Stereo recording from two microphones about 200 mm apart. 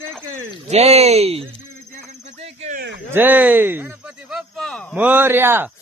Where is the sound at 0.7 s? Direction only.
30° right (ahead or behind).